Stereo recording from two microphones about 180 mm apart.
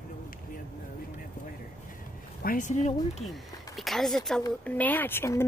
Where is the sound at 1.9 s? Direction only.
50° left (ahead or behind).